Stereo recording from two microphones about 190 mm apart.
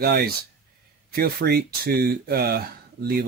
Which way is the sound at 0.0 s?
60° right (ahead or behind).